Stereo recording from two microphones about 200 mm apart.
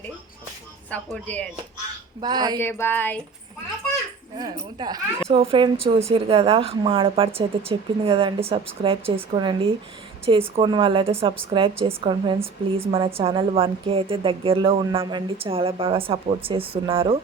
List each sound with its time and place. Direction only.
0.9 s speech: 5° left (ahead or behind)
2.2 s a woman's voice: 20° right (ahead or behind)
2.6 s speech: 10° left (ahead or behind)
4.8 s a woman's voice: 20° right (ahead or behind)